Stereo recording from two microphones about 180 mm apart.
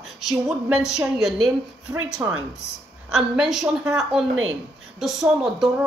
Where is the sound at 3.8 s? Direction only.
15° right (ahead or behind).